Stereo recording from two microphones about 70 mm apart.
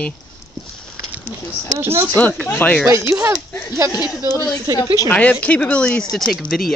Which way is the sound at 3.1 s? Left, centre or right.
Right.